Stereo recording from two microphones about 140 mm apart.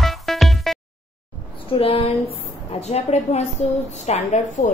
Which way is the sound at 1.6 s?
40° left (ahead or behind).